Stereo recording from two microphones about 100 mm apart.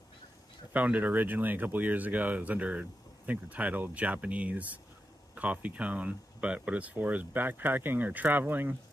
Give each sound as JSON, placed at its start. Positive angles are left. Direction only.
{"t": 0.7, "sound": "speech", "side_deg": -15}